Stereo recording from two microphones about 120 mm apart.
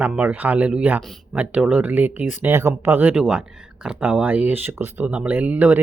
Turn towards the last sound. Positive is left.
turn(degrees=-10)  # may be behind; listen again after turning